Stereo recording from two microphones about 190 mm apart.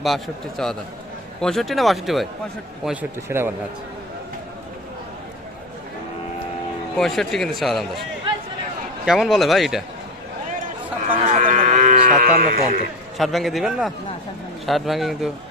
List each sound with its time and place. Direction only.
0.0 s a man's voice: centre (ahead or behind)
6.9 s a man's voice: centre (ahead or behind)
9.0 s a man's voice: centre (ahead or behind)
11.3 s speech: 40° right (ahead or behind)
13.1 s a man's voice: centre (ahead or behind)